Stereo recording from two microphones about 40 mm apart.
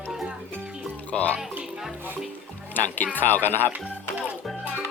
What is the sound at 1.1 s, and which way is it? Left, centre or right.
Speech, left.